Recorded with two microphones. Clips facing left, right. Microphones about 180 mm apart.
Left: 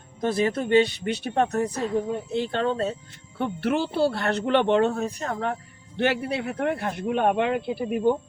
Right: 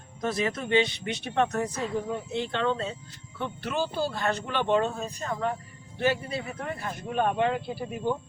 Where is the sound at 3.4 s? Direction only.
60° left (ahead or behind).